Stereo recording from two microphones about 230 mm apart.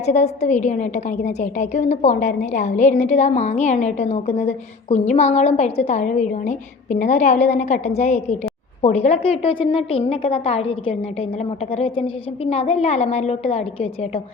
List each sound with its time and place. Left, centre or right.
0.0 s a woman's voice: left